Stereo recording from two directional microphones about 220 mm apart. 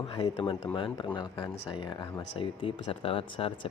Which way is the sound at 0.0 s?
25° left (ahead or behind).